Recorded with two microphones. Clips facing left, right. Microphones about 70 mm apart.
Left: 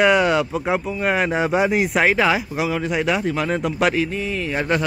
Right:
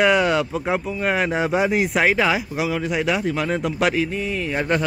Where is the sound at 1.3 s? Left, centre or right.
Left.